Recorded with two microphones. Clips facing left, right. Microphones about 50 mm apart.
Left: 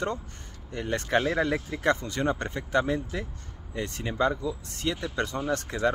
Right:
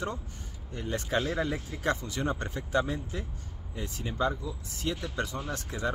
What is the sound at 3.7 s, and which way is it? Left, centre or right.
A man's voice, left.